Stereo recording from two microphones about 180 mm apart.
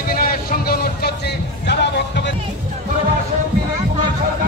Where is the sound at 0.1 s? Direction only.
55° left (ahead or behind).